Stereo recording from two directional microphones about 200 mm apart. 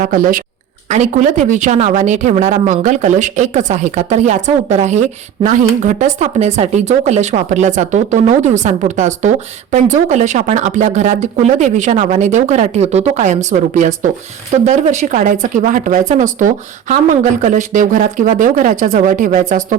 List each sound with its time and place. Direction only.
0.0 s speech: 45° right (ahead or behind)